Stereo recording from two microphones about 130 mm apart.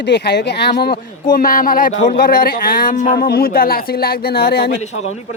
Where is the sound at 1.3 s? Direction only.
90° left.